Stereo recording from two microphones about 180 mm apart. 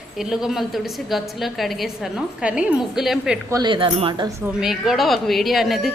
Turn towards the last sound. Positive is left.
turn(degrees=0)  # may be behind; listen again after turning